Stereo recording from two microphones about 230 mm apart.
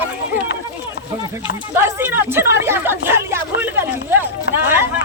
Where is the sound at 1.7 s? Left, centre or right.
Centre.